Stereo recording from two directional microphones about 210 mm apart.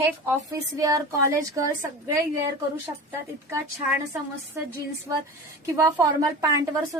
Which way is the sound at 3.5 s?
15° right (ahead or behind).